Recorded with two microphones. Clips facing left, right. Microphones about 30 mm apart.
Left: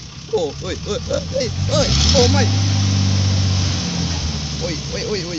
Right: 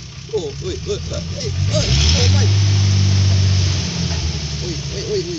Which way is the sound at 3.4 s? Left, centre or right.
Right.